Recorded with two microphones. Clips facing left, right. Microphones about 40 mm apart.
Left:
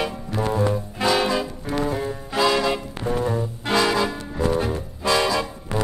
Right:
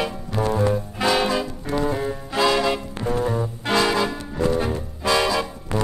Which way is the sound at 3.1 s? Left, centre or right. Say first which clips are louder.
Right 1 dB; left.